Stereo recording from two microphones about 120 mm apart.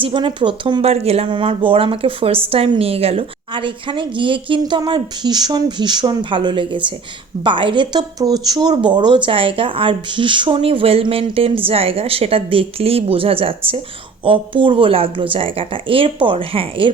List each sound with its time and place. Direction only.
0.0 s speech: 40° right (ahead or behind); by 1.3 s 60° right (ahead or behind)
1.3 s a woman's voice: 45° right (ahead or behind)